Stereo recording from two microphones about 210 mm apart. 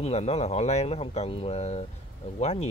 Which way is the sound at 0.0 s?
30° left (ahead or behind).